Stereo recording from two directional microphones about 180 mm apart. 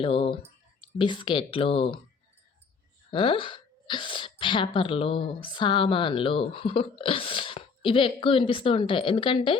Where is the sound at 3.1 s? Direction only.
30° left (ahead or behind).